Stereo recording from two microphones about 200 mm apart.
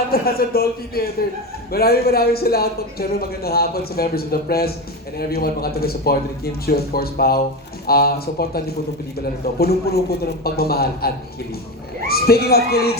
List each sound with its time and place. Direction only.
0.1 s speech: 50° left (ahead or behind)